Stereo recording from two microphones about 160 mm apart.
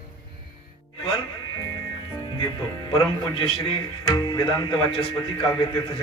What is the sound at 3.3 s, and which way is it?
Speech, 35° left (ahead or behind).